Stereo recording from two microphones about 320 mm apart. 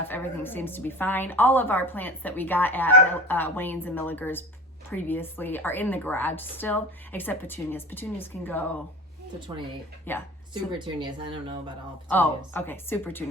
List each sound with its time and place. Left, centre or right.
0.1 s a woman's voice: centre
9.5 s speech: centre
10.1 s a woman's voice: centre
10.5 s speech: centre
12.0 s a woman's voice: centre